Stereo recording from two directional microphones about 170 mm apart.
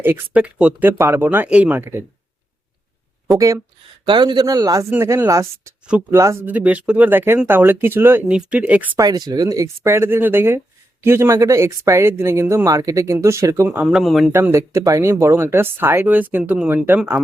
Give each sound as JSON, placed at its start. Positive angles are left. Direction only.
{"t": 0.0, "sound": "speech", "side_deg": -10}
{"t": 3.3, "sound": "speech", "side_deg": -20}
{"t": 9.0, "sound": "speech", "side_deg": -25}
{"t": 14.3, "sound": "speech", "side_deg": -15}